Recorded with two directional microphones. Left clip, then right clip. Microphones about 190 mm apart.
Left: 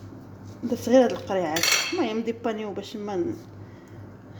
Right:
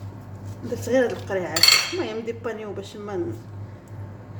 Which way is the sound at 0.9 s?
40° left (ahead or behind).